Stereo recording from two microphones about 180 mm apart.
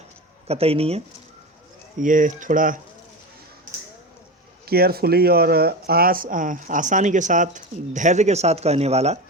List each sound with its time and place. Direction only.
0.4 s speech: 35° right (ahead or behind)
2.0 s speech: 45° right (ahead or behind)
4.6 s speech: 60° right (ahead or behind); by 9.1 s 35° right (ahead or behind)